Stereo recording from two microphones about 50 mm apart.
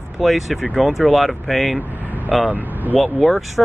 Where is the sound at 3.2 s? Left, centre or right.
Centre.